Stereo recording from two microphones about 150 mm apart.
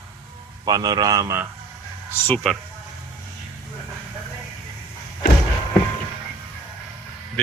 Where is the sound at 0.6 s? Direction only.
25° right (ahead or behind).